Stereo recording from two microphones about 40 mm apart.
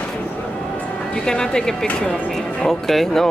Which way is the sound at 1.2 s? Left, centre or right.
Centre.